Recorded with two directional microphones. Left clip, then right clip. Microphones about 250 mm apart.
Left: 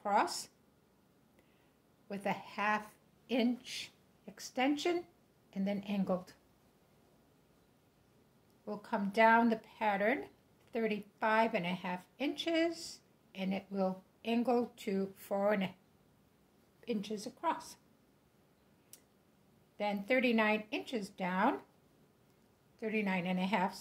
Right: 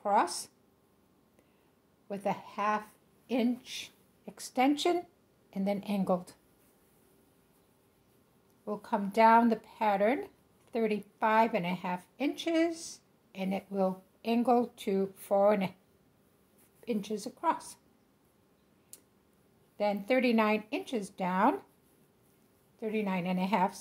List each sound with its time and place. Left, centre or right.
0.0 s speech: right
2.0 s a woman's voice: centre
8.6 s speech: right
16.8 s speech: right
19.8 s speech: right
22.8 s speech: centre